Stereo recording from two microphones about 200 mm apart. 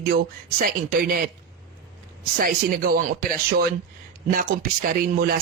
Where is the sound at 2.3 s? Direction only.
45° right (ahead or behind).